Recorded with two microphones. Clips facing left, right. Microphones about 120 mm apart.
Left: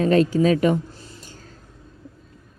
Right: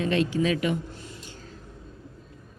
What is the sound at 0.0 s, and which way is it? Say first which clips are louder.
Speech: left 7 dB; 40° left (ahead or behind).